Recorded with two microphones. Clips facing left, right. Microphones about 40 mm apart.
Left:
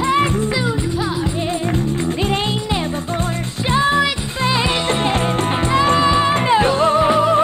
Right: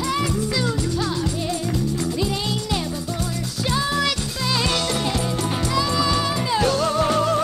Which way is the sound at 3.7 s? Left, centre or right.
Left.